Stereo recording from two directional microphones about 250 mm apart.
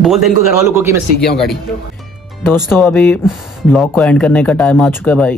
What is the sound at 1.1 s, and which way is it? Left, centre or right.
Speech, left.